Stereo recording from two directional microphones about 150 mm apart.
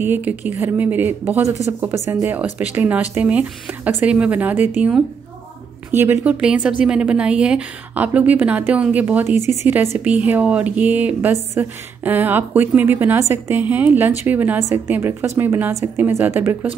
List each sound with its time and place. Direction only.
0.0 s a woman's voice: 15° right (ahead or behind)
9.4 s speech: 50° left (ahead or behind)
9.9 s a woman's voice: 10° right (ahead or behind)